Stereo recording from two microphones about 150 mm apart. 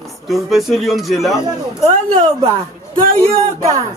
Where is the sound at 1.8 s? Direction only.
40° right (ahead or behind).